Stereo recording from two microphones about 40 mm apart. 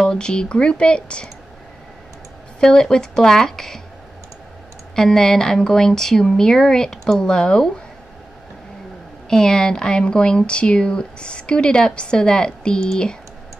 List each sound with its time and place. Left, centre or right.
0.0 s speech: left
2.6 s a woman's voice: centre
4.9 s a woman's voice: centre
9.3 s speech: centre